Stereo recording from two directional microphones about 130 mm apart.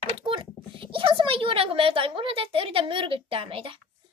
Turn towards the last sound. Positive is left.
turn(degrees=-45)  # may be behind; listen again after turning